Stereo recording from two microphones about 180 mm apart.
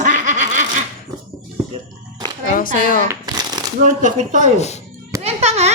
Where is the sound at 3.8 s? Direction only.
45° right (ahead or behind).